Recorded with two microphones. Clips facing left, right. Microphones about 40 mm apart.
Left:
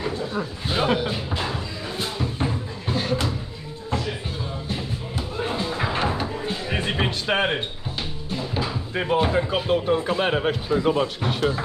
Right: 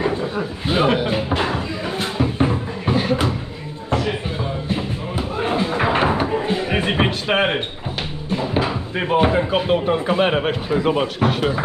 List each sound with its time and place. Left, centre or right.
0.7 s speech: right
1.3 s music: right
4.6 s a sound: right
8.3 s speech: right